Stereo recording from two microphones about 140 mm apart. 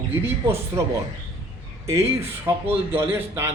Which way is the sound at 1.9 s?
20° right (ahead or behind).